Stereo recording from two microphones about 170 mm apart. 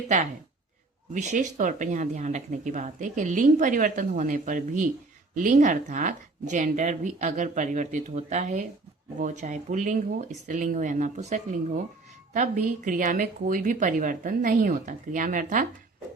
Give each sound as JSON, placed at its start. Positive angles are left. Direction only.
{"t": 1.1, "sound": "speech", "side_deg": -45}